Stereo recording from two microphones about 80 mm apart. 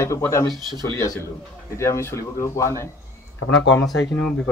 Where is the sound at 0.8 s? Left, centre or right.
Left.